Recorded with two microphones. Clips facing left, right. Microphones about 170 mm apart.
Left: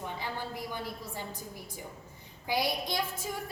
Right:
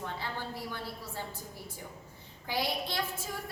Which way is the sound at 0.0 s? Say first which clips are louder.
Left 1 dB; 15° left (ahead or behind).